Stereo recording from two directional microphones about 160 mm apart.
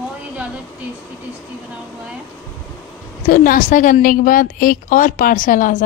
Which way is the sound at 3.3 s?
55° left (ahead or behind).